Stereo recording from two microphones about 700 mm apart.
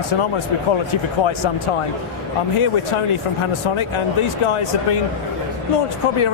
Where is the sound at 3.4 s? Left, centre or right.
Left.